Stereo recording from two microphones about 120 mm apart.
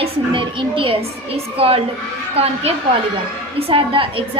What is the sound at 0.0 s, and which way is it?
A woman's voice, 45° right (ahead or behind).